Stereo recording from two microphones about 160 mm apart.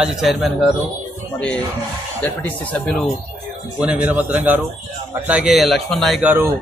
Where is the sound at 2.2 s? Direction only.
5° left (ahead or behind).